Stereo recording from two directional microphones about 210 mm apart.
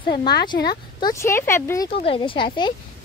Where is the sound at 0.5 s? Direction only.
50° left (ahead or behind).